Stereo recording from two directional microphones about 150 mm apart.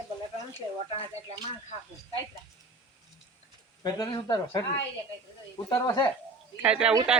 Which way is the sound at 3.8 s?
25° left (ahead or behind).